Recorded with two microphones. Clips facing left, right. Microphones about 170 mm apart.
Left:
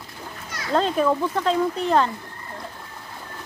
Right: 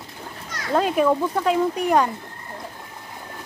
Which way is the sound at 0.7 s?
10° right (ahead or behind).